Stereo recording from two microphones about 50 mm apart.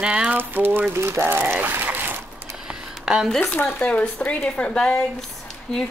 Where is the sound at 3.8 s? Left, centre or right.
Left.